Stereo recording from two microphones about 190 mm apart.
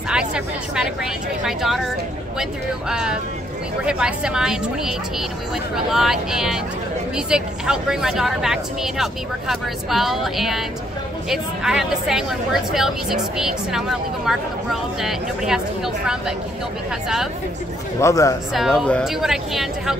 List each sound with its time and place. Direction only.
0.1 s speech: 5° right (ahead or behind)
2.9 s speech: 5° right (ahead or behind)
18.0 s speech: 15° left (ahead or behind)
18.8 s speech: centre (ahead or behind)